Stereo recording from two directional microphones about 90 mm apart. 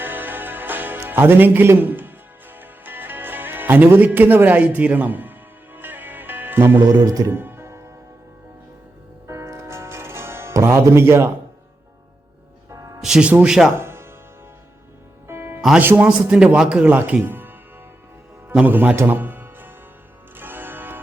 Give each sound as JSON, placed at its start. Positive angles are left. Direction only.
{"t": 0.0, "sound": "music", "side_deg": -20}
{"t": 7.0, "sound": "speech", "side_deg": -40}
{"t": 7.3, "sound": "music", "side_deg": -25}
{"t": 9.2, "sound": "music", "side_deg": -35}
{"t": 12.7, "sound": "music", "side_deg": -40}
{"t": 13.0, "sound": "a man's voice", "side_deg": -5}
{"t": 13.7, "sound": "music", "side_deg": -25}
{"t": 15.3, "sound": "music", "side_deg": -25}
{"t": 15.8, "sound": "speech", "side_deg": -25}
{"t": 16.0, "sound": "a man's voice", "side_deg": -10}
{"t": 17.2, "sound": "music", "side_deg": -25}
{"t": 18.6, "sound": "a man's voice", "side_deg": -20}
{"t": 20.3, "sound": "music", "side_deg": -25}